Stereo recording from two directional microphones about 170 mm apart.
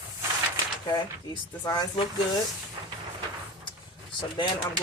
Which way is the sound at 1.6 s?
25° left (ahead or behind).